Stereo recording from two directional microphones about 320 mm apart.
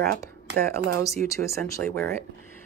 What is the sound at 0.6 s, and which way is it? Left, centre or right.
Speech, right.